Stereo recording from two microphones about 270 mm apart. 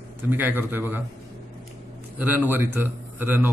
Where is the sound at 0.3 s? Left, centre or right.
Centre.